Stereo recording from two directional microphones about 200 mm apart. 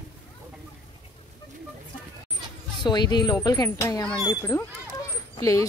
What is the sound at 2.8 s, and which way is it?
Speech, 20° left (ahead or behind).